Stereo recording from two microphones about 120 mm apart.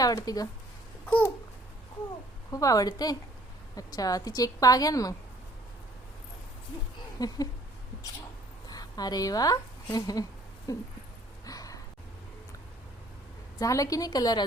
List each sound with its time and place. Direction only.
0.0 s speech: 30° left (ahead or behind)
2.5 s a woman's voice: 30° left (ahead or behind)
7.2 s a woman's voice: 30° left (ahead or behind)
8.6 s a sound: 35° left (ahead or behind)
9.9 s a woman's voice: 30° left (ahead or behind)
11.4 s a sound: 30° left (ahead or behind)
13.6 s a woman's voice: 30° left (ahead or behind)